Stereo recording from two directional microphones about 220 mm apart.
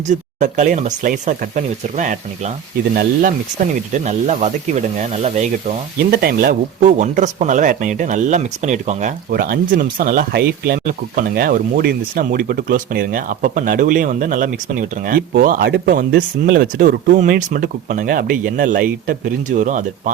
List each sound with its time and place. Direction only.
0.1 s speech: 35° right (ahead or behind)